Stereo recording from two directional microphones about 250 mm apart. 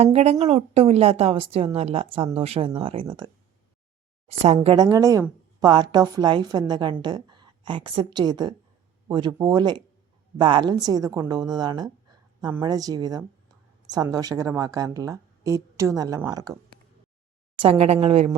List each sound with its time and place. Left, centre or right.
0.0 s a woman's voice: right
4.3 s a woman's voice: right
17.6 s a woman's voice: right